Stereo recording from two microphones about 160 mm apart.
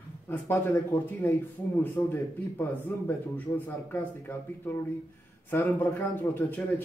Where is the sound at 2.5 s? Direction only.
15° left (ahead or behind).